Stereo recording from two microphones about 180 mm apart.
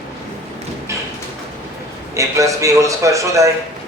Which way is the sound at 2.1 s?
15° right (ahead or behind).